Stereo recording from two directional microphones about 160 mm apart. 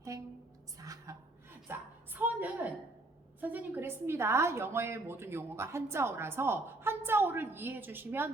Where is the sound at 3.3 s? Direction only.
10° right (ahead or behind).